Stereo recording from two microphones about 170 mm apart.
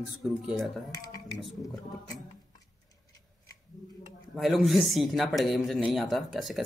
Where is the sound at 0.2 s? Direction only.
Centre (ahead or behind).